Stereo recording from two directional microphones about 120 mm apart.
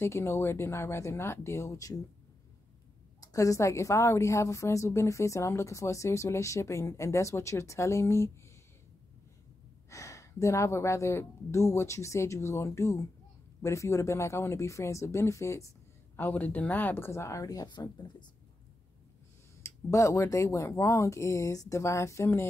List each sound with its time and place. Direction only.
0.0 s a woman's voice: 20° left (ahead or behind)
3.2 s a woman's voice: 30° left (ahead or behind)
9.8 s a woman's voice: 25° left (ahead or behind)
19.6 s a woman's voice: 25° left (ahead or behind)